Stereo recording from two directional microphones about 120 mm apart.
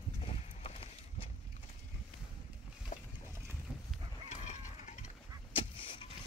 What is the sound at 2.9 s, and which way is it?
Boat, 55° left (ahead or behind).